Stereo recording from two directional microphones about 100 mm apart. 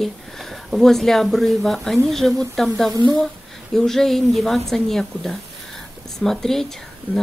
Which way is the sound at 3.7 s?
5° left (ahead or behind).